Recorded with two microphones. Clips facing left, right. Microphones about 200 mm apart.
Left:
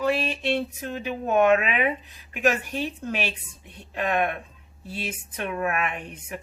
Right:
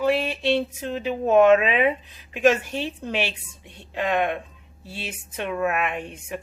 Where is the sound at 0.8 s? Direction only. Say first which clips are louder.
Right 4 dB; 25° right (ahead or behind).